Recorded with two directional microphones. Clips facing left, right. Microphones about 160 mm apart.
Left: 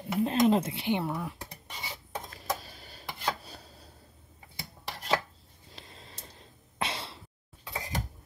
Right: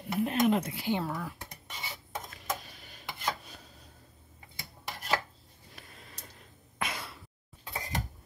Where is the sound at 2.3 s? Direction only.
35° left (ahead or behind).